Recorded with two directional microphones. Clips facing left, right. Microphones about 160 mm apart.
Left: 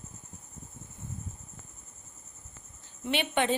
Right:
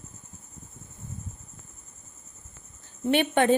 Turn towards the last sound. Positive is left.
turn(degrees=-50)  # may be behind; listen again after turning